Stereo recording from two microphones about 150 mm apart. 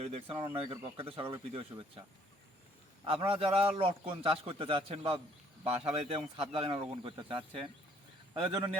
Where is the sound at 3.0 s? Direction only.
35° right (ahead or behind).